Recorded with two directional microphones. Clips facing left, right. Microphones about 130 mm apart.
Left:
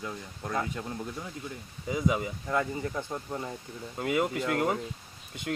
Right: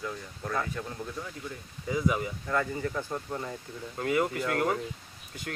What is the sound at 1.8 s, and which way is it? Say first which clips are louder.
Speech: even; 20° left (ahead or behind).